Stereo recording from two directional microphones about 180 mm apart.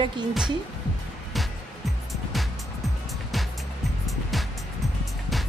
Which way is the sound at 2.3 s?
Centre (ahead or behind).